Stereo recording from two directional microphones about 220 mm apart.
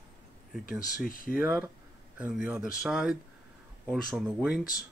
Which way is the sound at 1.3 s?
10° right (ahead or behind).